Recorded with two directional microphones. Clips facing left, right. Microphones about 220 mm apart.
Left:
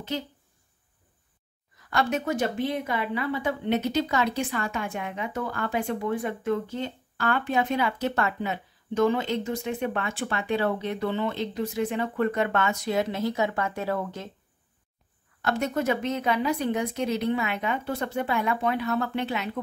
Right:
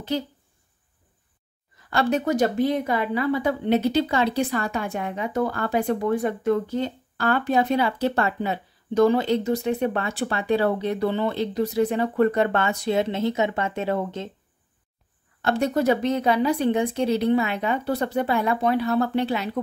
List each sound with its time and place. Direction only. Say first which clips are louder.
0.1 s speech: right 5 dB; 35° right (ahead or behind)
1.9 s speech: right 4 dB; 35° right (ahead or behind)
15.4 s speech: right 5 dB; 30° right (ahead or behind)